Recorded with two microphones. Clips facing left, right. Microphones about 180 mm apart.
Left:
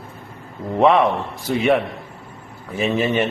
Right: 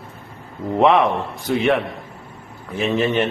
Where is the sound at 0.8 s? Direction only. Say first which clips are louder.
Even; centre (ahead or behind).